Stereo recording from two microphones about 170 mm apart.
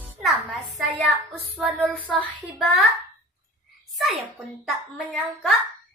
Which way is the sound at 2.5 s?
Centre (ahead or behind).